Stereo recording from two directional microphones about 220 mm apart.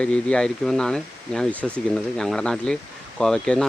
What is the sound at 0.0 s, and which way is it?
Speech, 5° left (ahead or behind).